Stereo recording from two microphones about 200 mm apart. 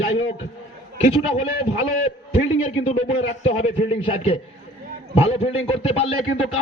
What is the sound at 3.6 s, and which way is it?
A man's voice, 30° left (ahead or behind).